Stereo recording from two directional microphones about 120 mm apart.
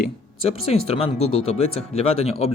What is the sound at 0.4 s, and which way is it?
Speech, 55° left (ahead or behind).